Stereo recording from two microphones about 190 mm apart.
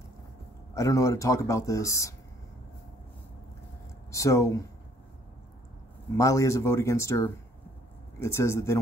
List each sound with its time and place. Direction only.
0.7 s speech: 15° left (ahead or behind)
4.1 s speech: 15° left (ahead or behind)
6.1 s speech: 15° left (ahead or behind)